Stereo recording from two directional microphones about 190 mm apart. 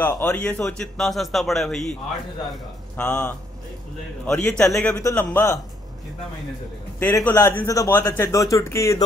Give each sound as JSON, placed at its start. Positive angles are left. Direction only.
{"t": 0.0, "sound": "a man's voice", "side_deg": 10}
{"t": 3.0, "sound": "a man's voice", "side_deg": 5}
{"t": 7.0, "sound": "a man's voice", "side_deg": 10}